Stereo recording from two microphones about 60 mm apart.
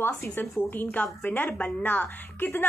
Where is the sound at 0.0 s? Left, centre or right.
Left.